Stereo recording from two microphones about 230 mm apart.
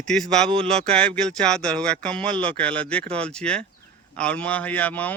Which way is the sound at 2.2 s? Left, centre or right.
Right.